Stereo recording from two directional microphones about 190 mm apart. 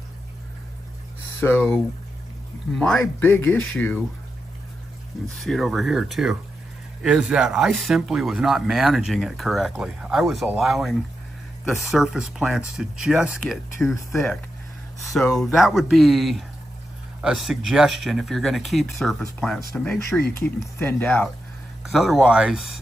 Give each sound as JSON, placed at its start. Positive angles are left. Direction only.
{"t": 1.4, "sound": "speech", "side_deg": 10}
{"t": 2.7, "sound": "speech", "side_deg": 5}
{"t": 5.4, "sound": "speech", "side_deg": 0}
{"t": 21.8, "sound": "speech", "side_deg": 0}